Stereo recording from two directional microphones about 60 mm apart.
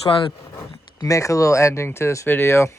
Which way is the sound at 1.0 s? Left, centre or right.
Left.